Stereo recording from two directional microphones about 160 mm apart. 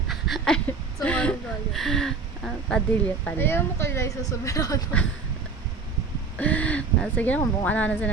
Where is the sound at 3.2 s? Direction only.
15° left (ahead or behind).